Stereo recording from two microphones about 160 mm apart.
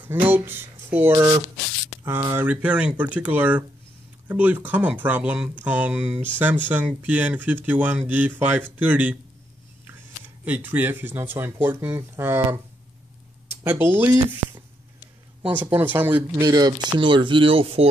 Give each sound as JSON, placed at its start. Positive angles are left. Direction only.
{"t": 0.0, "sound": "speech", "side_deg": -10}
{"t": 13.7, "sound": "speech", "side_deg": -10}
{"t": 16.4, "sound": "speech", "side_deg": -25}